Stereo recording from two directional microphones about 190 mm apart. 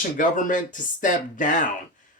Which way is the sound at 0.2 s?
45° left (ahead or behind).